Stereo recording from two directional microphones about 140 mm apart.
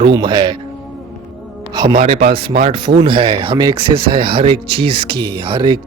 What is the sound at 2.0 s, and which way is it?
Speech, 45° right (ahead or behind).